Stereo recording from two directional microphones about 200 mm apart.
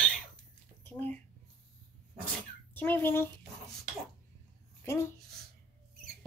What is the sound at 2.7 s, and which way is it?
Speech, 10° left (ahead or behind).